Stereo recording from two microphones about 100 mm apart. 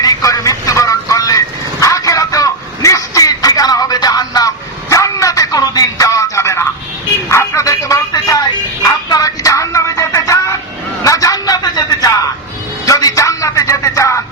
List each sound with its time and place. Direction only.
0.0 s vehicle: 35° left (ahead or behind)
7.3 s music: 30° left (ahead or behind)
8.8 s a sound: 35° left (ahead or behind)
12.8 s music: 35° left (ahead or behind)